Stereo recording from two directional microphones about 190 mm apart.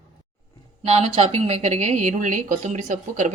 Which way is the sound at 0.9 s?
30° right (ahead or behind).